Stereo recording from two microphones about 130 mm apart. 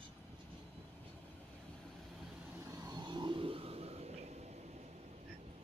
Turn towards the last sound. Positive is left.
turn(degrees=-55)  # may be behind; listen again after turning